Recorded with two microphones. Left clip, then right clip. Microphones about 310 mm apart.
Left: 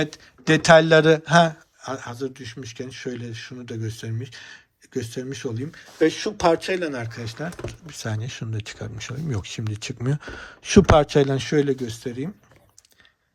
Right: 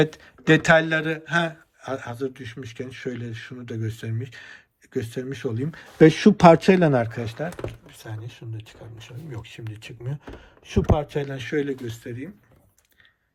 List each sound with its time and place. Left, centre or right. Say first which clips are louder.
0.0 s a man's voice: right 4 dB; centre
6.0 s speech: right 6 dB; centre
7.9 s speech: left 8 dB; centre